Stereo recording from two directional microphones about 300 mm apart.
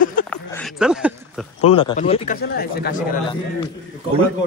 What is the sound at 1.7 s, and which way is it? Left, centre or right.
Speech, centre.